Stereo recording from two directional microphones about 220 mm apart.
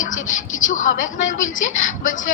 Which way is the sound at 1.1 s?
35° left (ahead or behind).